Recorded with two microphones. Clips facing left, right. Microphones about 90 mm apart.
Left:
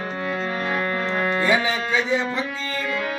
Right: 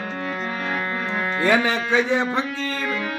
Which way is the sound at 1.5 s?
60° right (ahead or behind).